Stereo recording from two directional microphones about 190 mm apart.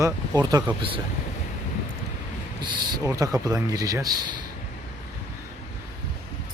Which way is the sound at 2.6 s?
20° right (ahead or behind).